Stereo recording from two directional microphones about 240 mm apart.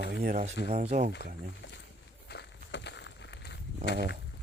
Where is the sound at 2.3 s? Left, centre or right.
Left.